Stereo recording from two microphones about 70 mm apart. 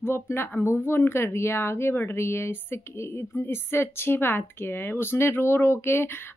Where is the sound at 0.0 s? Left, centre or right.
Left.